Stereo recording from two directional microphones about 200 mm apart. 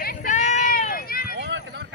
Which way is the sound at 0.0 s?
50° left (ahead or behind).